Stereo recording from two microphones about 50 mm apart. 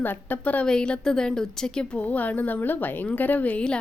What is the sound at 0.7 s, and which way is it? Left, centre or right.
Speech, centre.